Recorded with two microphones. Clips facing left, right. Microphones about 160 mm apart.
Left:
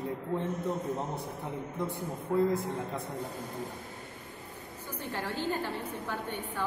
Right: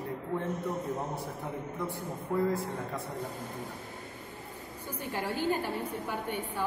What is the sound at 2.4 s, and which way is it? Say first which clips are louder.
Speech: left 2 dB; 20° left (ahead or behind).